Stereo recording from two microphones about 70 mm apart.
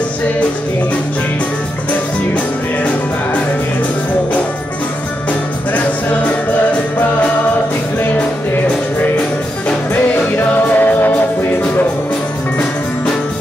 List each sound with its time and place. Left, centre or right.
10.3 s music: left